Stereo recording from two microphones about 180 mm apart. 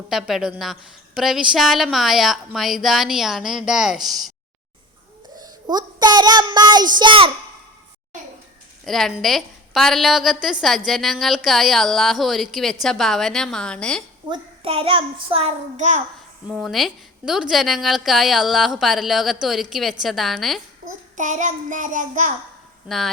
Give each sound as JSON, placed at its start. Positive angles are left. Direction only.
{"t": 0.1, "sound": "a woman's voice", "side_deg": 0}
{"t": 5.4, "sound": "a child's voice", "side_deg": -25}
{"t": 8.8, "sound": "a woman's voice", "side_deg": 0}
{"t": 14.3, "sound": "a child's voice", "side_deg": -30}
{"t": 16.5, "sound": "a woman's voice", "side_deg": 0}
{"t": 21.2, "sound": "child singing", "side_deg": -45}
{"t": 22.9, "sound": "a woman's voice", "side_deg": 0}